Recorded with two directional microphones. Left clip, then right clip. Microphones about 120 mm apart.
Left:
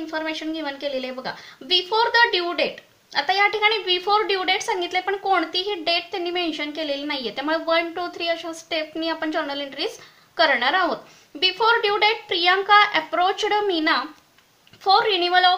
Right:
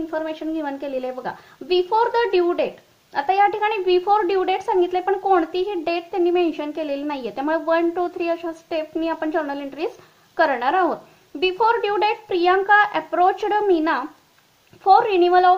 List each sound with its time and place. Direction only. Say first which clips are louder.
0.1 s a woman's voice: left 2 dB; 50° right (ahead or behind)